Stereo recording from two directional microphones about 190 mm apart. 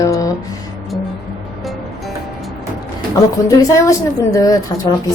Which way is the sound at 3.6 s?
15° left (ahead or behind).